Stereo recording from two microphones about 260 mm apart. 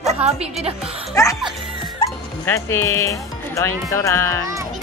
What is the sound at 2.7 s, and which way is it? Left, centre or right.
Speech, centre.